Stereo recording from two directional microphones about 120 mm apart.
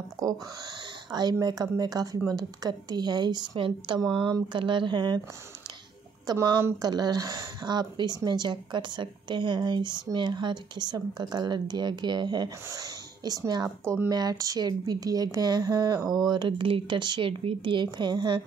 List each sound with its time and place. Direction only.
0.2 s speech: 35° right (ahead or behind)
6.2 s speech: 30° right (ahead or behind)
13.8 s speech: 20° right (ahead or behind); by 18.4 s 40° right (ahead or behind)